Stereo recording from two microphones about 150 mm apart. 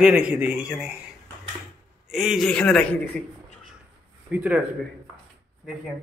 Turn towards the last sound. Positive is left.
turn(degrees=-10)  # may be behind; listen again after turning